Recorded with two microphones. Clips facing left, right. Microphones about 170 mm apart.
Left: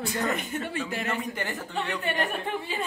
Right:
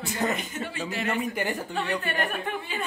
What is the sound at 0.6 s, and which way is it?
Speech, 50° left (ahead or behind).